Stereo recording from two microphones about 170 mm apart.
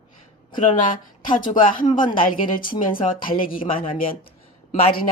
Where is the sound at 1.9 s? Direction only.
30° left (ahead or behind).